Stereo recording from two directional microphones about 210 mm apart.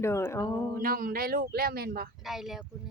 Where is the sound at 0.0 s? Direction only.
10° left (ahead or behind).